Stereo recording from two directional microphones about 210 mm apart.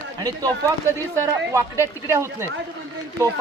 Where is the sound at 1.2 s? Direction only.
15° right (ahead or behind).